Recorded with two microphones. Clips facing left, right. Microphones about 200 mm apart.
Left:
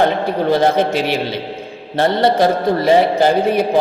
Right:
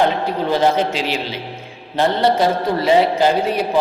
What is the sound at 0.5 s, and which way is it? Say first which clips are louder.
Speech: left 2 dB; 55° left (ahead or behind).